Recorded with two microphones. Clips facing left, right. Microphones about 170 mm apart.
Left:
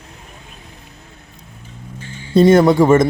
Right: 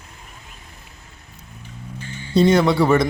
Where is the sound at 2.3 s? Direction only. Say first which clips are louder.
Left 5 dB; 50° left (ahead or behind).